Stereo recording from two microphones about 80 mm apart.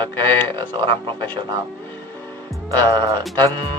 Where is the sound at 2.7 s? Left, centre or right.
Right.